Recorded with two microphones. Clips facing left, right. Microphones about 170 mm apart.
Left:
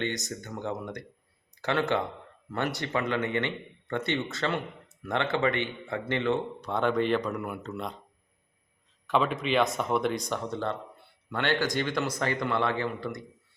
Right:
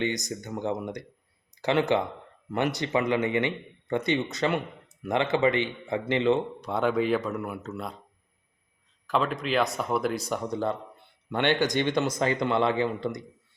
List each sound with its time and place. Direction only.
0.0 s a man's voice: 15° right (ahead or behind)
9.0 s speech: centre (ahead or behind); by 13.2 s 20° right (ahead or behind)